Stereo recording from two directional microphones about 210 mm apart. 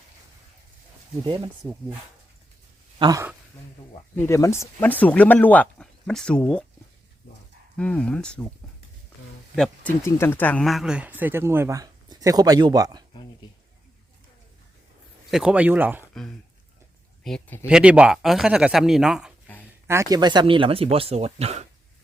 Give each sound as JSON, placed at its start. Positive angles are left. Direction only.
{"t": 1.6, "sound": "speech", "side_deg": -15}
{"t": 3.0, "sound": "speech", "side_deg": -15}
{"t": 4.1, "sound": "speech", "side_deg": 10}
{"t": 7.8, "sound": "speech", "side_deg": 5}
{"t": 9.6, "sound": "speech", "side_deg": 10}
{"t": 15.3, "sound": "speech", "side_deg": -5}
{"t": 17.2, "sound": "speech", "side_deg": 5}
{"t": 17.7, "sound": "speech", "side_deg": -5}
{"t": 19.6, "sound": "speech", "side_deg": -15}